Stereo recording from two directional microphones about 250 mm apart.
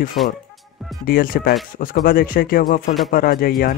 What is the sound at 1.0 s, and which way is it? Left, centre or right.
Speech, left.